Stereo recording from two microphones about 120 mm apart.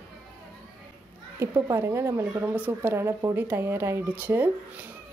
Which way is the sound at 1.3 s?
25° right (ahead or behind).